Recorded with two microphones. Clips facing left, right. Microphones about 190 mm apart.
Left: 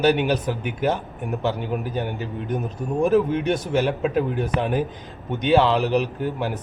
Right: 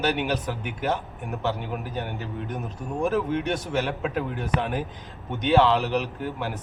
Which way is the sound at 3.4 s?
15° left (ahead or behind).